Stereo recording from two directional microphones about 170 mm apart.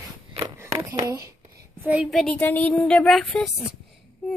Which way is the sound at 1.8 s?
5° right (ahead or behind).